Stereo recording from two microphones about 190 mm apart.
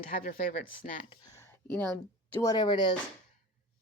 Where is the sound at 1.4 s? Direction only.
10° left (ahead or behind).